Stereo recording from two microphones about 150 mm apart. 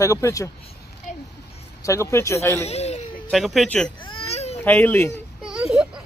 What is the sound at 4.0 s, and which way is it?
Baby cry, 35° left (ahead or behind).